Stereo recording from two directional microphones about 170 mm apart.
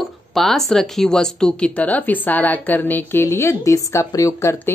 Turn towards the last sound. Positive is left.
turn(degrees=15)  # may be behind; listen again after turning